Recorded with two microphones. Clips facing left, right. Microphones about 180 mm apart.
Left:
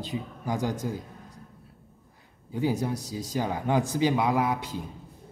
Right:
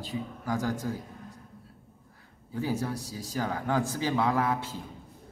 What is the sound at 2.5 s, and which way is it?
Speech, 20° left (ahead or behind).